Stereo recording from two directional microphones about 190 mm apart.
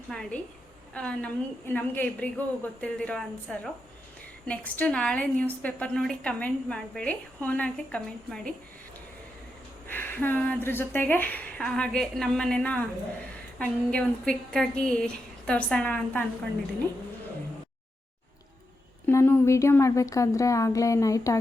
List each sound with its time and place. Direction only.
0.1 s a woman's voice: 5° left (ahead or behind)
9.8 s a woman's voice: 10° left (ahead or behind)
19.0 s a woman's voice: 10° left (ahead or behind)